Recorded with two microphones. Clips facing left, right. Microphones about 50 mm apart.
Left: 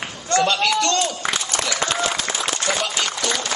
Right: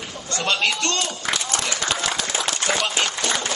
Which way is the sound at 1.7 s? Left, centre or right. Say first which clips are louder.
Left 4 dB; left.